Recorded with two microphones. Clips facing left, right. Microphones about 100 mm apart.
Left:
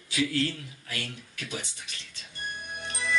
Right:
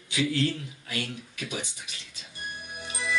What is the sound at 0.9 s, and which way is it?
Speech, 15° right (ahead or behind).